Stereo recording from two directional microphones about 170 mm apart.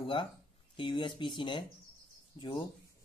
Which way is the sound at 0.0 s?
30° left (ahead or behind).